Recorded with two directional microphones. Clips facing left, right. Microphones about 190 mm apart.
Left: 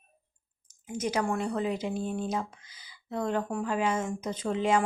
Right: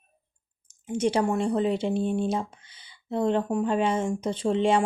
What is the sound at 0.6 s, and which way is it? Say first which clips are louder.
Speech: right 7 dB; 30° right (ahead or behind).